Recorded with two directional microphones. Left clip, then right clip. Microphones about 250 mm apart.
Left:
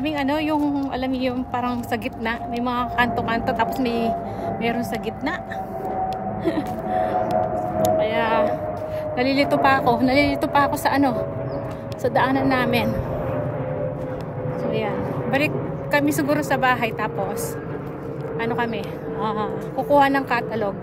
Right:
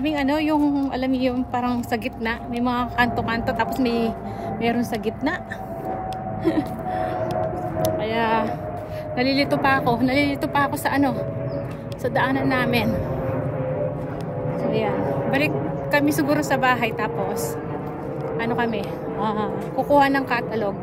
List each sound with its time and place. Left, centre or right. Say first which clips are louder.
0.0 s a woman's voice: right 1 dB; centre
6.4 s gasp: right 3 dB; centre
7.8 s a woman's voice: left 2 dB; centre
14.6 s a woman's voice: right 2 dB; centre
18.4 s a woman's voice: even; centre